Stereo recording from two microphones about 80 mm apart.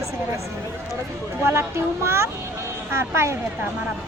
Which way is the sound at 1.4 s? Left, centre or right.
Right.